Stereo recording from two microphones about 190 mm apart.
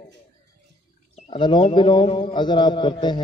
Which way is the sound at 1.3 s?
25° left (ahead or behind).